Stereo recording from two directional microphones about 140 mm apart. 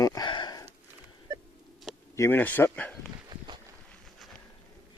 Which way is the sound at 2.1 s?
15° left (ahead or behind).